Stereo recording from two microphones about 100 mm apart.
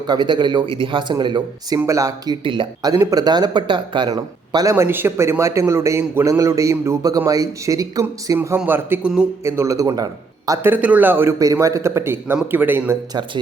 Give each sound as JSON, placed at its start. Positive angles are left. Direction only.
{"t": 0.1, "sound": "speech", "side_deg": -45}
{"t": 1.9, "sound": "speech", "side_deg": -35}
{"t": 2.4, "sound": "speech", "side_deg": -55}
{"t": 3.0, "sound": "speech", "side_deg": -35}
{"t": 4.7, "sound": "a man's voice", "side_deg": -25}
{"t": 8.4, "sound": "a man's voice", "side_deg": -20}
{"t": 10.6, "sound": "a man's voice", "side_deg": -15}
{"t": 11.3, "sound": "a man's voice", "side_deg": -35}